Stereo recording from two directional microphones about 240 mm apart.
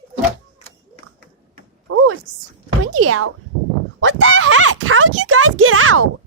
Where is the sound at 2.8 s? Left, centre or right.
Right.